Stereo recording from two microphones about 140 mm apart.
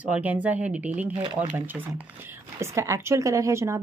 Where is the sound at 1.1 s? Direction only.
40° right (ahead or behind).